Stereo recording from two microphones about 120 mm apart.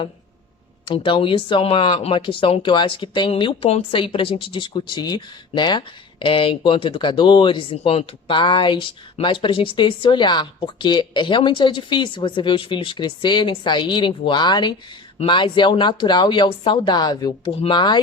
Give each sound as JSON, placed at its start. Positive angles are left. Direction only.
{"t": 0.9, "sound": "speech", "side_deg": 45}